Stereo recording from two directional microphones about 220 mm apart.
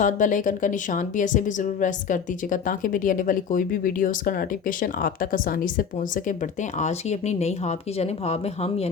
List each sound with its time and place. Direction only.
0.0 s speech: 35° left (ahead or behind)